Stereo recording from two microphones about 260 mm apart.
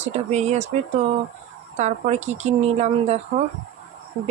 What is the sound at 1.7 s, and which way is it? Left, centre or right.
Speech, right.